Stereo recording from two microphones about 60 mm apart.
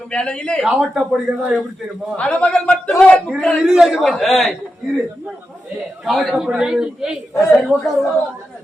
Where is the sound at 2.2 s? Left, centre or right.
Centre.